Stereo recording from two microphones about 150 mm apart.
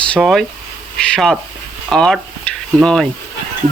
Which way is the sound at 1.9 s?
5° left (ahead or behind).